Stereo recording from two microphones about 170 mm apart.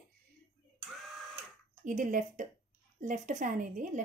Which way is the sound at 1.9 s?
50° right (ahead or behind).